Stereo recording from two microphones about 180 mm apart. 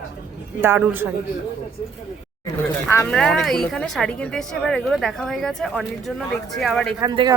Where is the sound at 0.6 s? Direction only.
10° right (ahead or behind).